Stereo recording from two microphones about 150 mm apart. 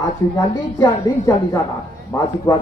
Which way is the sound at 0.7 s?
20° left (ahead or behind).